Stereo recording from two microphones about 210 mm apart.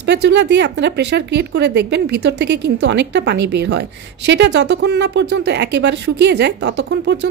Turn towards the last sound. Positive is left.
turn(degrees=-55)  # may be behind; listen again after turning